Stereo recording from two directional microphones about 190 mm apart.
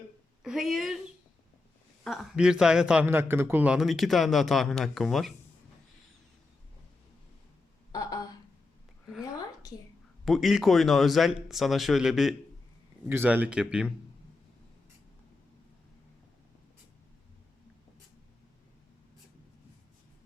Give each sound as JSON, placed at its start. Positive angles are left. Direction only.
{"t": 0.4, "sound": "a man's voice", "side_deg": 0}
{"t": 2.0, "sound": "a man's voice", "side_deg": -5}
{"t": 7.9, "sound": "a sound", "side_deg": 20}
{"t": 10.2, "sound": "a man's voice", "side_deg": 0}